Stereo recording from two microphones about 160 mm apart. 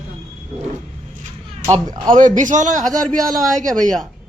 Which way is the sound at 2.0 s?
55° right (ahead or behind).